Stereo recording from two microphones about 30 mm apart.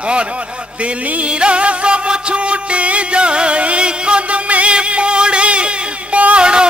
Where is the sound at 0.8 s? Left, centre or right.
Right.